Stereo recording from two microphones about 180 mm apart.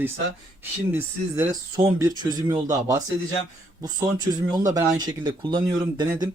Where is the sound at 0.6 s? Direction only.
10° right (ahead or behind).